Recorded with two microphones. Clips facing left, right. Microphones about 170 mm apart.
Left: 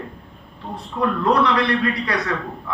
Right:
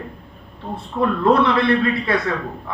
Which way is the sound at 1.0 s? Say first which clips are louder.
Right 2 dB; 30° right (ahead or behind).